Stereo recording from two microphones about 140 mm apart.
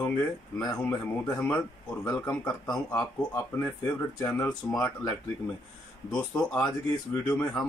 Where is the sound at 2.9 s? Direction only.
20° left (ahead or behind).